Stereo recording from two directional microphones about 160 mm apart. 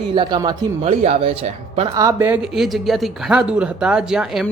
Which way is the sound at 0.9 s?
40° right (ahead or behind).